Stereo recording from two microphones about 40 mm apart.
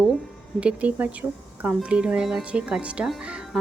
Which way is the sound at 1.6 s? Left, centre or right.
Right.